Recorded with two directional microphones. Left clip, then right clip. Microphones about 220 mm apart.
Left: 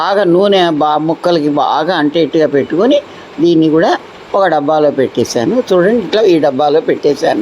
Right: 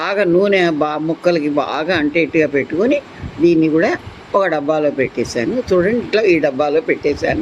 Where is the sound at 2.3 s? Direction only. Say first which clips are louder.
Left 4 dB; 50° left (ahead or behind).